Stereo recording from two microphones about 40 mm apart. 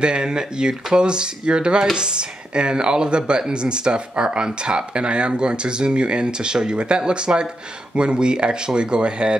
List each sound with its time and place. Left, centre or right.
0.0 s speech: right